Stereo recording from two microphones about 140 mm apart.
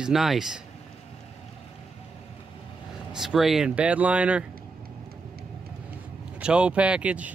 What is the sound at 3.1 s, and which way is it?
Speech, centre (ahead or behind).